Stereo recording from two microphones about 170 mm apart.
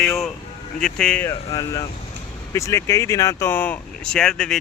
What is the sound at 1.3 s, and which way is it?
Speech, 20° left (ahead or behind).